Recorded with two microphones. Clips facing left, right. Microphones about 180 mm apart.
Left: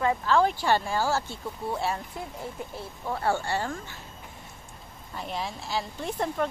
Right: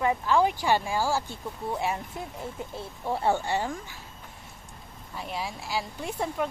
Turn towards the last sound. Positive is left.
turn(degrees=-10)  # may be behind; listen again after turning